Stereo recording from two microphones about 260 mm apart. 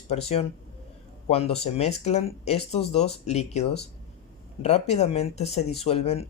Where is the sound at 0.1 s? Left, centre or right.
Left.